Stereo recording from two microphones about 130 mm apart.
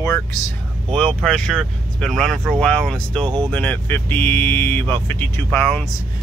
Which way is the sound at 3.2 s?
40° right (ahead or behind).